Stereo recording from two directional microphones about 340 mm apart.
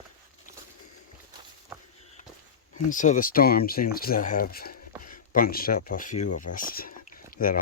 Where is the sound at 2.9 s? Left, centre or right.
Left.